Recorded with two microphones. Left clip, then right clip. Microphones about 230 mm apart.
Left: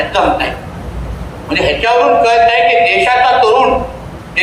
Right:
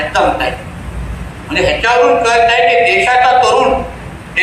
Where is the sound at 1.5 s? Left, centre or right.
Left.